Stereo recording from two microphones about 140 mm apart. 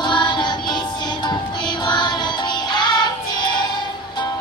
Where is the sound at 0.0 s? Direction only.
35° left (ahead or behind).